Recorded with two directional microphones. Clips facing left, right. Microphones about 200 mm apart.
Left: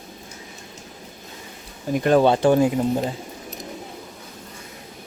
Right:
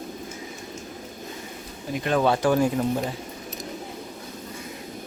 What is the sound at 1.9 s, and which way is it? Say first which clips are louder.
Speech: left 7 dB; 45° left (ahead or behind).